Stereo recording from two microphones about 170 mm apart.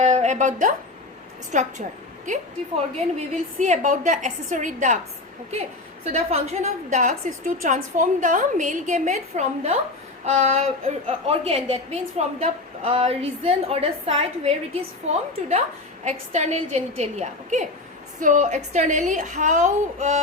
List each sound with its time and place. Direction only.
0.0 s a woman's voice: 40° right (ahead or behind)
6.1 s a woman's voice: 40° right (ahead or behind)
16.0 s a woman's voice: 45° right (ahead or behind)